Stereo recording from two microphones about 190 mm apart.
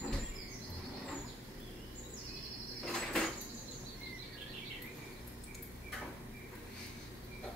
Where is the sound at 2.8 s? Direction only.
5° left (ahead or behind).